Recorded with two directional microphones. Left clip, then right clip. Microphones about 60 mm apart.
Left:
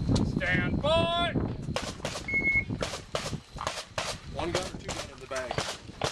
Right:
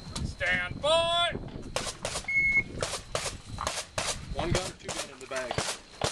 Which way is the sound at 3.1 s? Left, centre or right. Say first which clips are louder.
Even; left.